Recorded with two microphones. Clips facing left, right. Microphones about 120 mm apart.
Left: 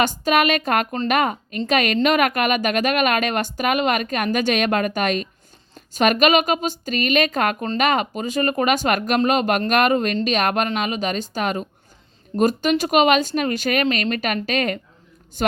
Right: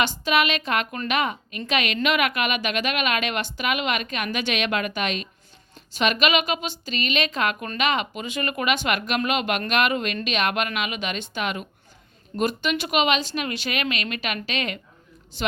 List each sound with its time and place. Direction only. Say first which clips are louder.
0.0 s a woman's voice: left 4 dB; 45° left (ahead or behind)